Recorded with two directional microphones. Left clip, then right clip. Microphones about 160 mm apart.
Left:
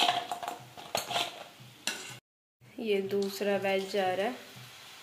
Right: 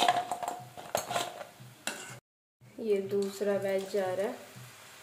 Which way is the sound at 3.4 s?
10° left (ahead or behind).